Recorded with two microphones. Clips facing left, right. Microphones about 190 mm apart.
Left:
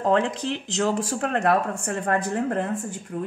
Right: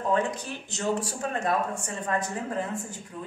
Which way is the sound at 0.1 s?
90° left.